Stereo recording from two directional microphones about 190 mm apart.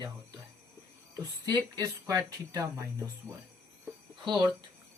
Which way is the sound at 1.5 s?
20° right (ahead or behind).